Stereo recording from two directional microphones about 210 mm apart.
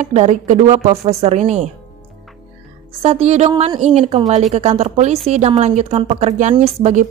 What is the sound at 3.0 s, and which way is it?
Speech, 30° right (ahead or behind).